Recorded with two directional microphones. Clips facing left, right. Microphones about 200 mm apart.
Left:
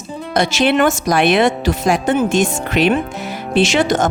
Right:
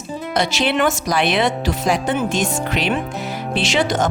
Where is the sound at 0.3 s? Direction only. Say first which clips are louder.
Left 5 dB; 50° left (ahead or behind).